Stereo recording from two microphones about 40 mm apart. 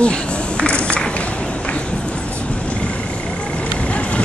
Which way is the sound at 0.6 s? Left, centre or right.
Left.